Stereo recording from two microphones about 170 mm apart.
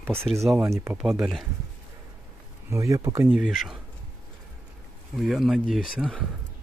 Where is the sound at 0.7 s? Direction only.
15° right (ahead or behind).